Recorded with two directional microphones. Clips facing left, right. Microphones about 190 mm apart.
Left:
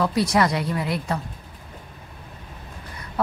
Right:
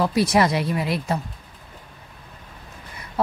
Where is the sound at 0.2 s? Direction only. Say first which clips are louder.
Right 3 dB; 25° right (ahead or behind).